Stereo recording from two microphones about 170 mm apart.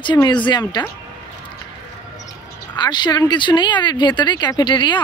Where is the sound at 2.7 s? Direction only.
25° left (ahead or behind).